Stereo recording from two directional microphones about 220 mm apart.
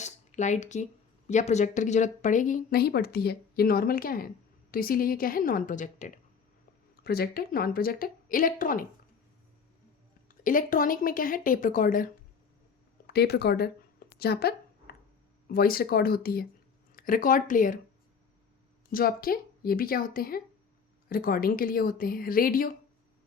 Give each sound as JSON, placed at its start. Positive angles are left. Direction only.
{"t": 0.0, "sound": "a sound", "side_deg": 35}
{"t": 1.3, "sound": "speech", "side_deg": 30}
{"t": 10.2, "sound": "speech", "side_deg": 40}
{"t": 14.2, "sound": "a sound", "side_deg": 45}
{"t": 15.4, "sound": "speech", "side_deg": 45}
{"t": 18.9, "sound": "speech", "side_deg": 40}